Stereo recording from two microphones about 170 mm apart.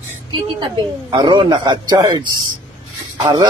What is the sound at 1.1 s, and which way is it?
A man's voice, 25° right (ahead or behind).